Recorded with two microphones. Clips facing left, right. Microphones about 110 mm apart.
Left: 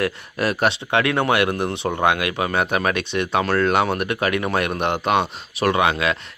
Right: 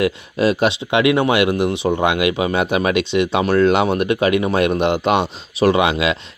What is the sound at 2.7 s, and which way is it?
Speech, 45° left (ahead or behind).